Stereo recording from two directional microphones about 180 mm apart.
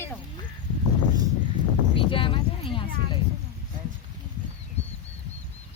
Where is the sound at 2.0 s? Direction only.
30° left (ahead or behind).